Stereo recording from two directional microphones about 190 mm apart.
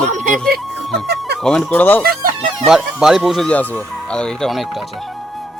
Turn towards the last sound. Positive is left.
turn(degrees=0)  # may be behind; listen again after turning